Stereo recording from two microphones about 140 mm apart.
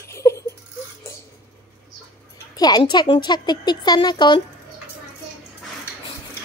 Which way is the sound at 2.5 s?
30° left (ahead or behind).